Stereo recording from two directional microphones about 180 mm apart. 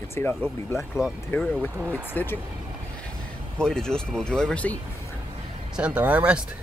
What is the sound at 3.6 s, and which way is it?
Speech, 5° left (ahead or behind).